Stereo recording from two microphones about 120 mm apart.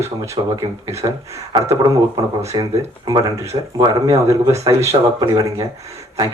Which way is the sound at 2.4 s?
25° right (ahead or behind).